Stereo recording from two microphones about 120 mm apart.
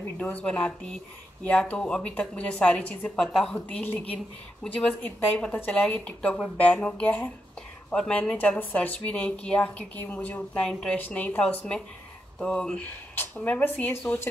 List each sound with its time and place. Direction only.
0.2 s a woman's voice: 10° left (ahead or behind)
3.2 s a woman's voice: centre (ahead or behind); by 14.3 s 20° left (ahead or behind)